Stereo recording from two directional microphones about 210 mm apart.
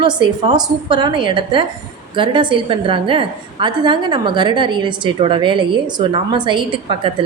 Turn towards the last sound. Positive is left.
turn(degrees=-25)  # may be behind; listen again after turning